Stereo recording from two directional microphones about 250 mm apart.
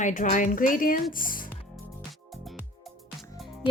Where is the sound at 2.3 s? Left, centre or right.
Centre.